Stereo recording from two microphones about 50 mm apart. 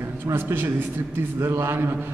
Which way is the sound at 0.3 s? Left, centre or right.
Right.